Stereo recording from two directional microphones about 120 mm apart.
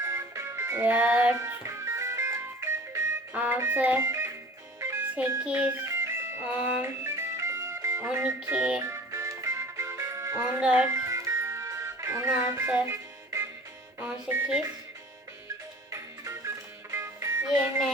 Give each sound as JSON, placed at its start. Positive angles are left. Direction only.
{"t": 0.0, "sound": "music", "side_deg": -25}
{"t": 1.4, "sound": "music", "side_deg": -25}
{"t": 5.4, "sound": "speech", "side_deg": -10}
{"t": 5.9, "sound": "music", "side_deg": -20}
{"t": 8.4, "sound": "speech", "side_deg": -10}
{"t": 8.9, "sound": "music", "side_deg": -25}
{"t": 10.6, "sound": "speech", "side_deg": -10}
{"t": 10.8, "sound": "music", "side_deg": -25}
{"t": 14.0, "sound": "speech", "side_deg": -15}
{"t": 15.9, "sound": "music", "side_deg": -25}